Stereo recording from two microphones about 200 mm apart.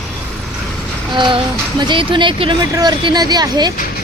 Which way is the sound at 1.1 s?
25° right (ahead or behind).